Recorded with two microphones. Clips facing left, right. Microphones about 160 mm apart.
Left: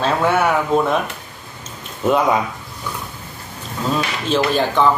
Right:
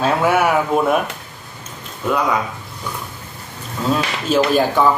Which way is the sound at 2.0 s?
25° left (ahead or behind).